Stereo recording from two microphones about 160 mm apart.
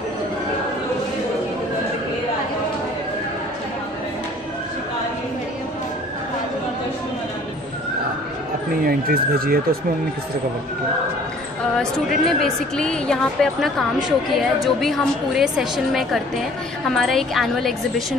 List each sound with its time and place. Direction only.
8.8 s speech: 70° right (ahead or behind)
11.8 s a woman's voice: centre (ahead or behind)